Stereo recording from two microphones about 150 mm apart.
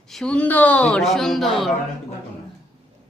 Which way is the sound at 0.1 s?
5° left (ahead or behind).